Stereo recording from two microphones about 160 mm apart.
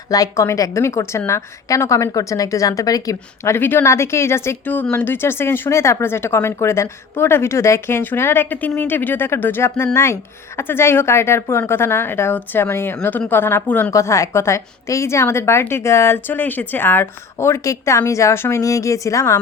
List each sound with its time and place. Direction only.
0.1 s speech: 20° left (ahead or behind)